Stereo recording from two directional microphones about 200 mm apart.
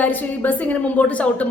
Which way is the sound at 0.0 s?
10° left (ahead or behind).